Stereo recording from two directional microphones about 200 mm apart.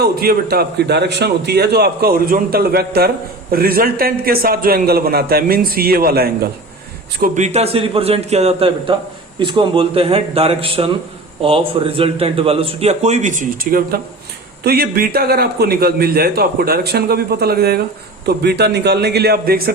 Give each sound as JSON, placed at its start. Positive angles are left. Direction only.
{"t": 0.0, "sound": "a man's voice", "side_deg": -50}
{"t": 7.2, "sound": "a man's voice", "side_deg": -35}